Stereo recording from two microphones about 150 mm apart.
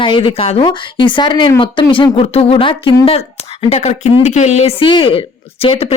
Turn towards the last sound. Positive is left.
turn(degrees=40)  # may be behind; listen again after turning